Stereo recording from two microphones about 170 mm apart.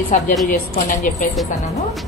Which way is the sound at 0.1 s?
50° left (ahead or behind).